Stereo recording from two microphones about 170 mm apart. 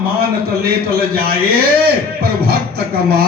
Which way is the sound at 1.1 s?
60° right (ahead or behind).